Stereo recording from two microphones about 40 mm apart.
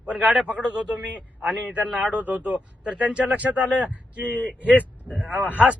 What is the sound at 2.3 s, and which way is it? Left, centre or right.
Speech, right.